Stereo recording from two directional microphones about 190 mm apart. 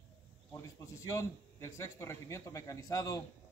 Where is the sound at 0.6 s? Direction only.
15° left (ahead or behind).